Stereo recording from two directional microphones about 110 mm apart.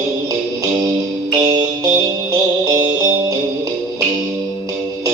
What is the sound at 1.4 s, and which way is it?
Music, 35° right (ahead or behind).